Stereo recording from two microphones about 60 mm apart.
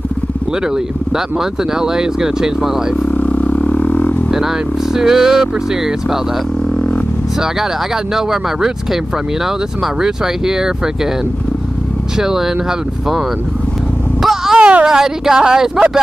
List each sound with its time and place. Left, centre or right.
1.1 s speech: centre
3.1 s a sound: left
4.3 s speech: centre
7.9 s speech: centre
12.2 s speech: centre
14.2 s a sound: centre
14.6 s speech: right
14.9 s speech: centre